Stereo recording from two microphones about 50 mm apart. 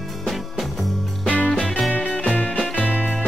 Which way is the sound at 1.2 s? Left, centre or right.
Left.